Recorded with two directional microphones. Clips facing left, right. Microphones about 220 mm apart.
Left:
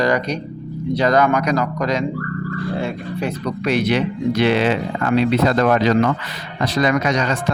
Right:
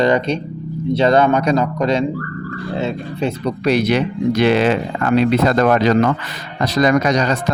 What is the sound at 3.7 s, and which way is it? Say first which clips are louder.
Speech: right 2 dB; 40° right (ahead or behind).